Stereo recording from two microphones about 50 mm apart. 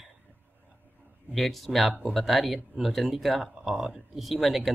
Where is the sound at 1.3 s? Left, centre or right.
Centre.